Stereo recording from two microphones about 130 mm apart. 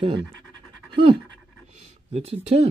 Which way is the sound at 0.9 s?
45° right (ahead or behind).